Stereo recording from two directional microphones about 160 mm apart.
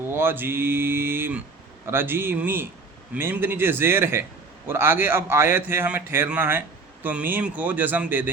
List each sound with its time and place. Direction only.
0.1 s a man's voice: 15° right (ahead or behind)